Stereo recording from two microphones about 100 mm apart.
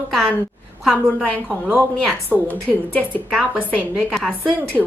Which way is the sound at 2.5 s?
15° left (ahead or behind).